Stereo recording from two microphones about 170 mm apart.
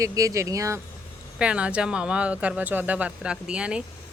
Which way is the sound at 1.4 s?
5° right (ahead or behind).